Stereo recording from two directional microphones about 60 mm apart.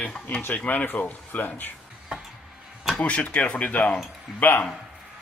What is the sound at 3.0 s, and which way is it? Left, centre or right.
Speech, left.